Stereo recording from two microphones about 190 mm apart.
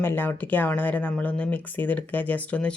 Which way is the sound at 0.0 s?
10° left (ahead or behind).